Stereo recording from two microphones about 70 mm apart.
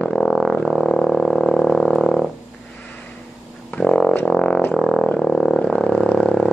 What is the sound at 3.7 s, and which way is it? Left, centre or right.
Music, centre.